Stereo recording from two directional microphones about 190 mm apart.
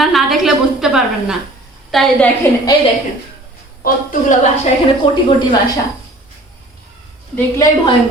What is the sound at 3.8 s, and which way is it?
Speech, 45° left (ahead or behind).